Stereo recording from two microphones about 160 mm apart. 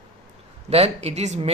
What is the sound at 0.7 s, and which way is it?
Speech, 40° right (ahead or behind).